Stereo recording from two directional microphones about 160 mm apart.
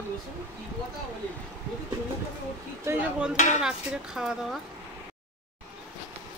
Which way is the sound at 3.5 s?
5° right (ahead or behind).